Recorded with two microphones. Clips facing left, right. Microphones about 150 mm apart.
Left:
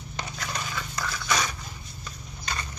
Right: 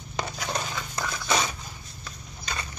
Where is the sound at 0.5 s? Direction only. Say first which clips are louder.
Right 3 dB; 20° right (ahead or behind).